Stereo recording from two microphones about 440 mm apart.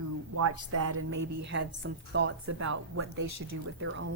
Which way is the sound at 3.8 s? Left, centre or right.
Right.